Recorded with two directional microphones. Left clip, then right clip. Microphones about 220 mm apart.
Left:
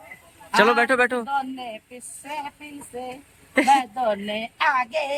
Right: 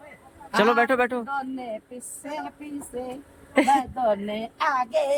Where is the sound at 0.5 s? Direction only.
5° right (ahead or behind).